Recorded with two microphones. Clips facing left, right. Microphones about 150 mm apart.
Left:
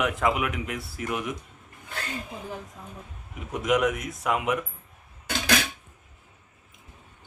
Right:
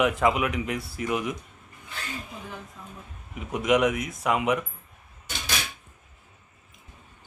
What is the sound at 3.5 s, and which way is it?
Speech, centre (ahead or behind).